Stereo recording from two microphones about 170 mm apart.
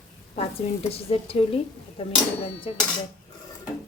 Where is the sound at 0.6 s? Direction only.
40° left (ahead or behind).